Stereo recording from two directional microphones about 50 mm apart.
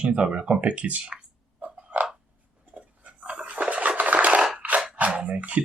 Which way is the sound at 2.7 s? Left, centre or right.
Right.